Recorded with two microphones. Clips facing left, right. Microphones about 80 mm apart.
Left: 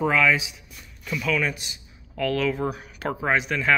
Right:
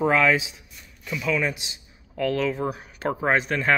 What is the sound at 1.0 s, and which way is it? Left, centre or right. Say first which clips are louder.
A man's voice: even; centre.